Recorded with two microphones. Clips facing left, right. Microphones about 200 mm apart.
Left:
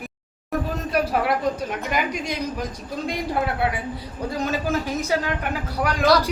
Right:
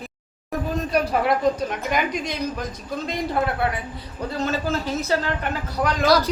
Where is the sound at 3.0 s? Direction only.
10° left (ahead or behind).